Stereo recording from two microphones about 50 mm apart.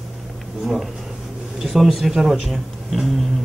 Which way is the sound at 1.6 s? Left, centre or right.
Centre.